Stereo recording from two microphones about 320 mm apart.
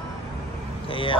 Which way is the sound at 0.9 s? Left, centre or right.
Centre.